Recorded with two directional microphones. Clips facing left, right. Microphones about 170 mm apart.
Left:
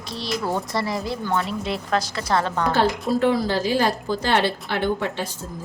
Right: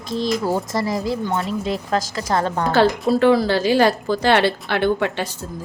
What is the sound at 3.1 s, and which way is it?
A woman's voice, 80° right.